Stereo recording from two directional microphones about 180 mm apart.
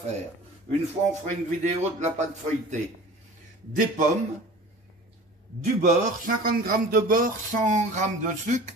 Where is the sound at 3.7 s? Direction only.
45° right (ahead or behind).